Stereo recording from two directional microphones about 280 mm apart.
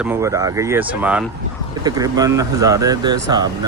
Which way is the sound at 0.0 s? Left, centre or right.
Centre.